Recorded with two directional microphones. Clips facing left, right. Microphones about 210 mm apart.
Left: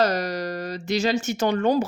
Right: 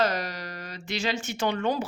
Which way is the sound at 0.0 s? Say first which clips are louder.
Left 5 dB; 40° left (ahead or behind).